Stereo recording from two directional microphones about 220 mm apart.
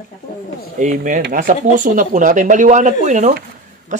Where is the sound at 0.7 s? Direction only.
35° right (ahead or behind).